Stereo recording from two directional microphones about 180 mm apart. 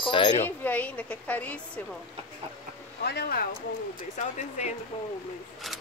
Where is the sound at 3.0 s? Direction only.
60° left (ahead or behind).